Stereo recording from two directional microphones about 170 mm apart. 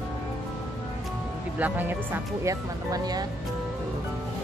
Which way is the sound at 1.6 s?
10° right (ahead or behind).